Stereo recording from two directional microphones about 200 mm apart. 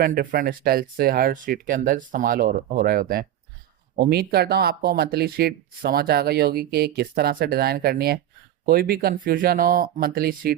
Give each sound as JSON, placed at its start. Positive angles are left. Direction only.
{"t": 0.0, "sound": "speech", "side_deg": -45}